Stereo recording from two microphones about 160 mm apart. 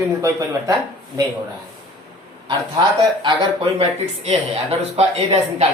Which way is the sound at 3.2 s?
35° right (ahead or behind).